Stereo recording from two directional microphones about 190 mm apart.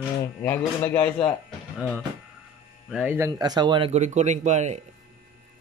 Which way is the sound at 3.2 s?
20° right (ahead or behind).